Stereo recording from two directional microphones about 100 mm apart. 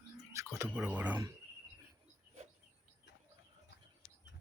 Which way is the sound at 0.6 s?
15° right (ahead or behind).